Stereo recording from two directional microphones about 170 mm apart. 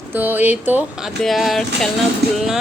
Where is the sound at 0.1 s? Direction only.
10° right (ahead or behind).